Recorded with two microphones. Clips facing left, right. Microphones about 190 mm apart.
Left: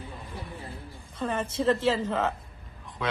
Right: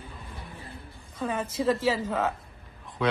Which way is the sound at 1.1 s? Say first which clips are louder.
Even; 10° right (ahead or behind).